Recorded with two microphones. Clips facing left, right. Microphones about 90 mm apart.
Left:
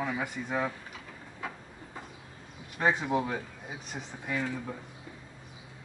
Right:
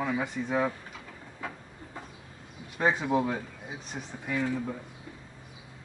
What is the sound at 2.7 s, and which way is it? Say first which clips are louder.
Speech: right 1 dB; centre (ahead or behind).